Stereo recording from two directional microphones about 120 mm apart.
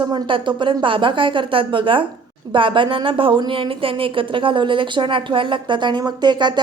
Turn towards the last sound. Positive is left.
turn(degrees=-40)  # may be behind; listen again after turning